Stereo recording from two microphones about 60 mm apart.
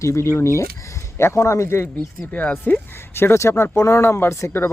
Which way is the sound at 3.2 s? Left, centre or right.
Left.